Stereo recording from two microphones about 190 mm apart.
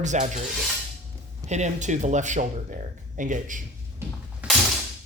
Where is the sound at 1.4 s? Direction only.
35° right (ahead or behind).